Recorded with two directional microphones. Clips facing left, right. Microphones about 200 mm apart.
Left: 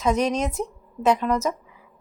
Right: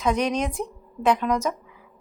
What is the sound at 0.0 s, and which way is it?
A woman's voice, 5° left (ahead or behind).